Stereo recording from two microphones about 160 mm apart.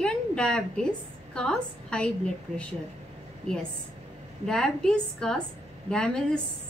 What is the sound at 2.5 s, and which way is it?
Speech, 45° right (ahead or behind).